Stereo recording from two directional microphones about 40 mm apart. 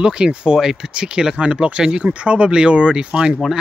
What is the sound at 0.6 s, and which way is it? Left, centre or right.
Speech, centre.